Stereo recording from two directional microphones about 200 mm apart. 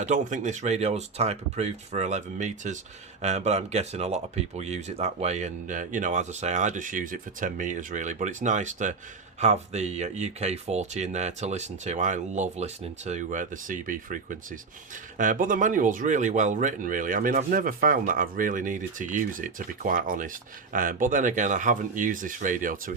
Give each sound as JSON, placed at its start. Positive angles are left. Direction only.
{"t": 0.0, "sound": "speech", "side_deg": -35}